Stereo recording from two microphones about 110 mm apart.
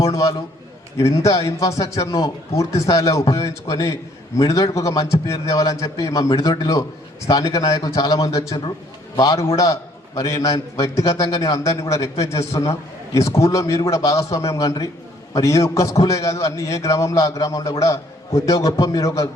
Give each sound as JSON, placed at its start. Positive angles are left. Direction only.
{"t": 0.0, "sound": "a man's voice", "side_deg": 30}